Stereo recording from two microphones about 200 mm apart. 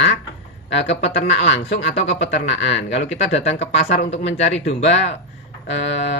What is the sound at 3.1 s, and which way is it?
Speech, 35° left (ahead or behind).